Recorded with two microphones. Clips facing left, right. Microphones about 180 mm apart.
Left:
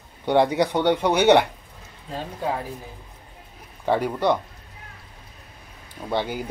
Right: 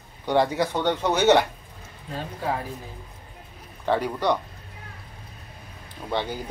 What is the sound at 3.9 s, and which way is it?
Speech, 10° left (ahead or behind).